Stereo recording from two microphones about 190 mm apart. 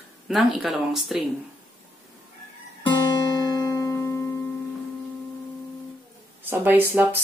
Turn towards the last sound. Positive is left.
turn(degrees=-10)  # may be behind; listen again after turning